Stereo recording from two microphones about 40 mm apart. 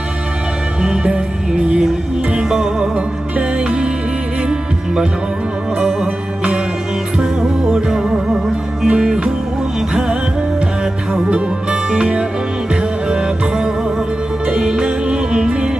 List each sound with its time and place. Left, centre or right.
0.8 s music: centre
2.4 s music: centre
7.7 s music: centre
11.1 s music: right